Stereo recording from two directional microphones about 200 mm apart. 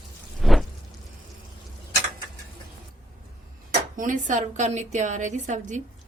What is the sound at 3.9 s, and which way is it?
A woman's voice, 40° right (ahead or behind).